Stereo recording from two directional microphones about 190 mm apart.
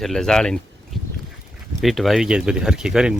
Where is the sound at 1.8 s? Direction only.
Centre (ahead or behind).